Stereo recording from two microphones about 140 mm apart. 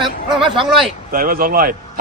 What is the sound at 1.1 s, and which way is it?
Speech, 90° right.